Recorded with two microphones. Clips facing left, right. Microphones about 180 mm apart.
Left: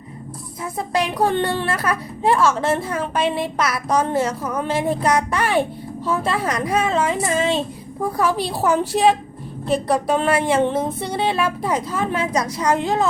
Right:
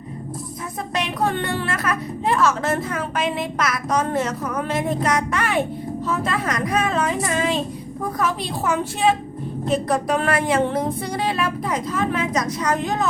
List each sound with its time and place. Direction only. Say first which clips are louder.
0.9 s a woman's voice: left 4 dB; 30° left (ahead or behind)
9.9 s speech: left 4 dB; 25° left (ahead or behind)